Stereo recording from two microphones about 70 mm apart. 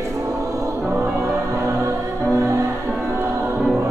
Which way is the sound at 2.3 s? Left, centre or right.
Right.